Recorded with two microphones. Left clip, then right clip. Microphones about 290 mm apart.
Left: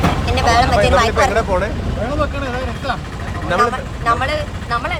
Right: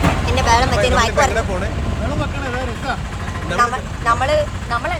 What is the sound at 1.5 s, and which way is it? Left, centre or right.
Vehicle, centre.